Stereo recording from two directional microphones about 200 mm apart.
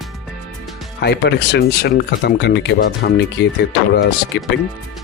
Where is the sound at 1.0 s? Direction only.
55° left (ahead or behind).